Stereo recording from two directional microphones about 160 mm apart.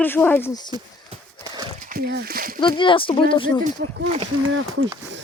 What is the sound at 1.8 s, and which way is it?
Speech, 70° right (ahead or behind).